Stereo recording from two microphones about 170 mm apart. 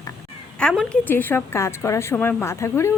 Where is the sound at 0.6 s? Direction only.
5° left (ahead or behind).